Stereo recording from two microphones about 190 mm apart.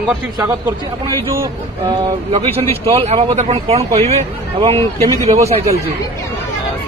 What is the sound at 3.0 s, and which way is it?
Speech, 30° right (ahead or behind).